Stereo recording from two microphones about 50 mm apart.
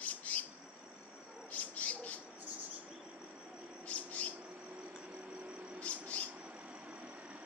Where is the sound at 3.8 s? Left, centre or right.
Left.